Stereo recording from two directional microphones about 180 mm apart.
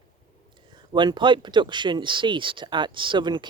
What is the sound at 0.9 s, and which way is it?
Speech, 25° right (ahead or behind).